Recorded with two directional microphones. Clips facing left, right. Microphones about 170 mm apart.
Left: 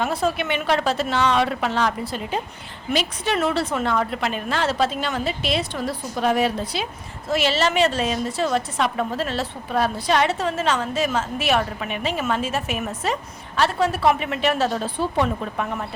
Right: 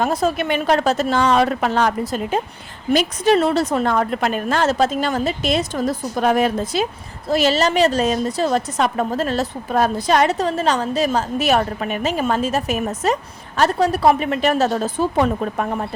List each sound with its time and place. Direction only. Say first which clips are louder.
0.0 s a woman's voice: right 4 dB; 40° right (ahead or behind)